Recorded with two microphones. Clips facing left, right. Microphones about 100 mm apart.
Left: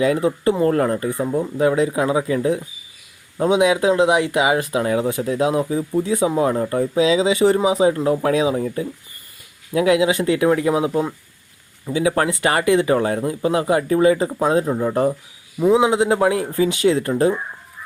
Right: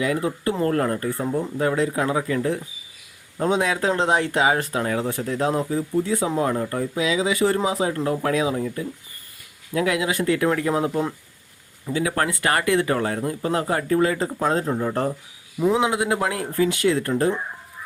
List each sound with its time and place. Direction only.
0.0 s speech: 25° left (ahead or behind)
9.7 s speech: 20° left (ahead or behind)